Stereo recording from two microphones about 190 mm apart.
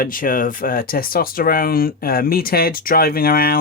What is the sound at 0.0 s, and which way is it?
Speech, 45° left (ahead or behind).